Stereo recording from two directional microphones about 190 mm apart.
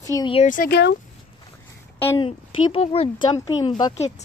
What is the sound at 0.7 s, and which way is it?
Speech, 60° left (ahead or behind).